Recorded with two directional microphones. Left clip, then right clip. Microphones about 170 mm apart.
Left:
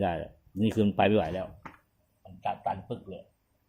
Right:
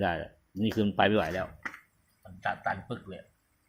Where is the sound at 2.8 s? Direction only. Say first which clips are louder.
Left 1 dB; 20° right (ahead or behind).